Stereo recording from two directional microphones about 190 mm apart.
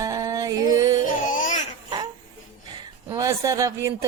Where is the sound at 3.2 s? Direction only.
15° right (ahead or behind).